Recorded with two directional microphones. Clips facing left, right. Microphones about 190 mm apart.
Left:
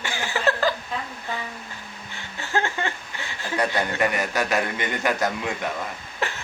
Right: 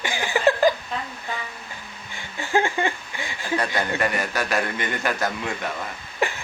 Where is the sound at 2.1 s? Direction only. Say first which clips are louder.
Right 4 dB; 15° right (ahead or behind).